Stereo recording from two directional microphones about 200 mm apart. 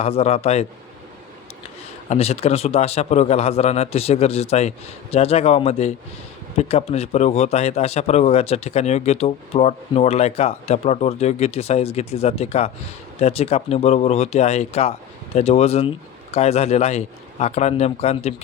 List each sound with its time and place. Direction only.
0.0 s a man's voice: 30° left (ahead or behind)
2.0 s a man's voice: 30° left (ahead or behind)